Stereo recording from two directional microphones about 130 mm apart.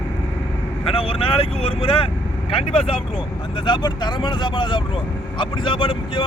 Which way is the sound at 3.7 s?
35° left (ahead or behind).